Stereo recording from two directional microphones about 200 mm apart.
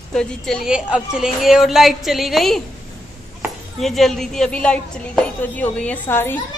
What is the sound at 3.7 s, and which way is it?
A woman's voice, centre (ahead or behind).